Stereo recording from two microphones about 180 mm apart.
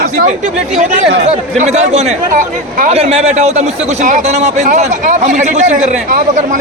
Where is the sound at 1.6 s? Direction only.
40° right (ahead or behind).